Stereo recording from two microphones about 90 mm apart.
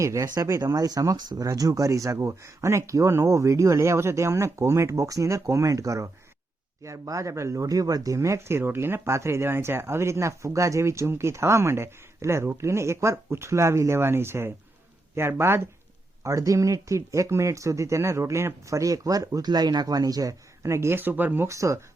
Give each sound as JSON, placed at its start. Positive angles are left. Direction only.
{"t": 0.0, "sound": "speech", "side_deg": -35}
{"t": 21.4, "sound": "speech", "side_deg": -35}